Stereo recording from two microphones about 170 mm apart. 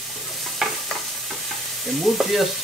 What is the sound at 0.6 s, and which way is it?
Stir, centre (ahead or behind).